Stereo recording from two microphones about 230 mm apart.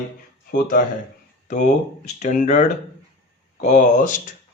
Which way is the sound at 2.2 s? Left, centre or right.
Left.